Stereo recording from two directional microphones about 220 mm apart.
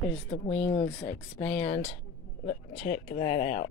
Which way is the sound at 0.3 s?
25° left (ahead or behind).